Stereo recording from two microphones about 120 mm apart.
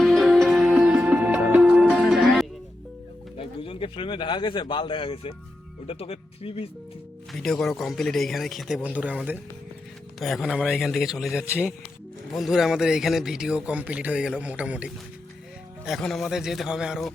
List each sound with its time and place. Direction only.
0.0 s music: centre (ahead or behind)
3.3 s speech: 45° left (ahead or behind)
7.3 s speech: 5° left (ahead or behind)
10.2 s speech: centre (ahead or behind)
15.9 s speech: 5° left (ahead or behind)